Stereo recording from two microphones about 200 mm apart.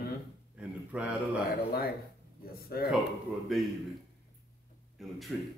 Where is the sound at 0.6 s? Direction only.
5° right (ahead or behind).